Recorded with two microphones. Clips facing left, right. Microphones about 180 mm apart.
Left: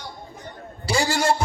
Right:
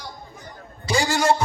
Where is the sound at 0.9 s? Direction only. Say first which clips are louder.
Right 1 dB; 30° left (ahead or behind).